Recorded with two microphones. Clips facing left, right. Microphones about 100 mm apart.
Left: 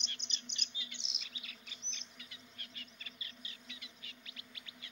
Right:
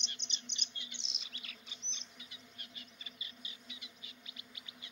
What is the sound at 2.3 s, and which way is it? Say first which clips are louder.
Bird: even; 20° right (ahead or behind).